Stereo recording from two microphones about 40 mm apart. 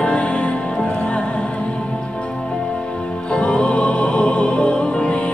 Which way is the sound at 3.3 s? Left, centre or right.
Left.